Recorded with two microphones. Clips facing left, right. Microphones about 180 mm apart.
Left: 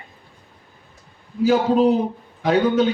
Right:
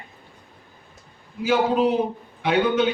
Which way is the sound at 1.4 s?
40° left (ahead or behind).